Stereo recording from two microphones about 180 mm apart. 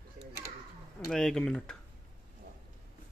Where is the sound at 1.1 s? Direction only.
Centre (ahead or behind).